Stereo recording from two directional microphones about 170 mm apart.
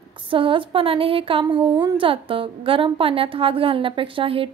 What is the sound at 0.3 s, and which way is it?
A woman's voice, 30° right (ahead or behind).